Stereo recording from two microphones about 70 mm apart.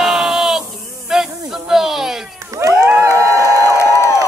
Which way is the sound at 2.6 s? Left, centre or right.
Right.